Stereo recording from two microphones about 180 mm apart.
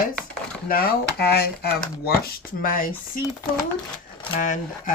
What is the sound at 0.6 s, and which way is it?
Speech, 55° left (ahead or behind).